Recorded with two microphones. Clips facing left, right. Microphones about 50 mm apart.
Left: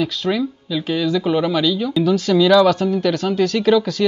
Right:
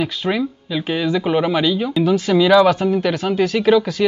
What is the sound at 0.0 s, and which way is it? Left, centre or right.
Speech, centre.